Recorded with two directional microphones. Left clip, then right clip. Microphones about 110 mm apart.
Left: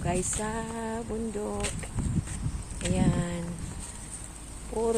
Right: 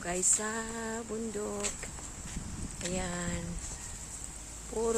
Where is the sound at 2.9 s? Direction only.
25° right (ahead or behind).